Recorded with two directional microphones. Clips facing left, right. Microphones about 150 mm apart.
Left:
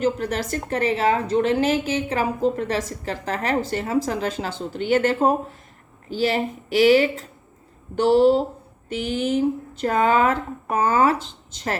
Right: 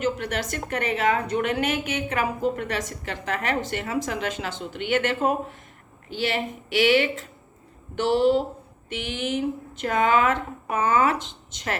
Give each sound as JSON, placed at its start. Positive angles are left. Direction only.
{"t": 0.0, "sound": "a woman's voice", "side_deg": 35}